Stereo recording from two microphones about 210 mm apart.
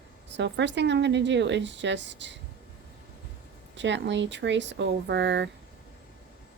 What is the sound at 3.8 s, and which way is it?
Speech, 60° right (ahead or behind).